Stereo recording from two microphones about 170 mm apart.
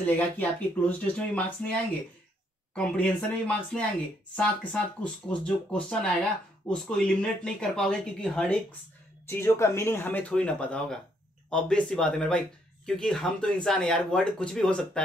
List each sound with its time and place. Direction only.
0.0 s speech: 10° left (ahead or behind)
2.7 s speech: 5° left (ahead or behind)
9.3 s speech: 15° left (ahead or behind)